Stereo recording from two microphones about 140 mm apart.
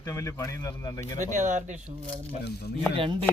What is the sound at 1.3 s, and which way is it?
Speech, 65° right (ahead or behind).